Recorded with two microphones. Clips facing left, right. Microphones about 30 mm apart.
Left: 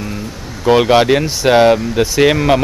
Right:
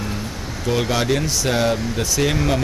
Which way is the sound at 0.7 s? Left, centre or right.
Left.